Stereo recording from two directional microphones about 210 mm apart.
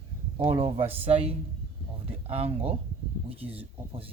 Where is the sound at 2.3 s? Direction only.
30° right (ahead or behind).